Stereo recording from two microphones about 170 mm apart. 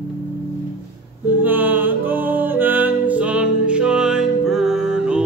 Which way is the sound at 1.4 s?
10° right (ahead or behind).